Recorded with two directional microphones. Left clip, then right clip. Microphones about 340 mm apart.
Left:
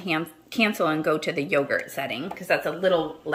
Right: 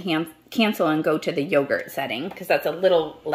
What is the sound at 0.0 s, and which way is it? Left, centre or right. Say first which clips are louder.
Speech: right 2 dB; centre.